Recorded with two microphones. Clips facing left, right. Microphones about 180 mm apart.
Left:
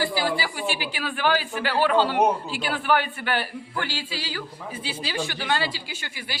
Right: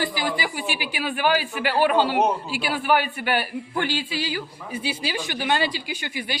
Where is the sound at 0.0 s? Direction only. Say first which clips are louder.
Left 1 dB; 15° right (ahead or behind).